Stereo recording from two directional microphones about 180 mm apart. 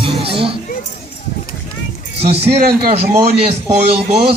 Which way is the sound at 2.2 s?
35° right (ahead or behind).